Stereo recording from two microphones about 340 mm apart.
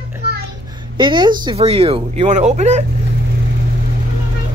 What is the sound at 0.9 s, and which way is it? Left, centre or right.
Speech, centre.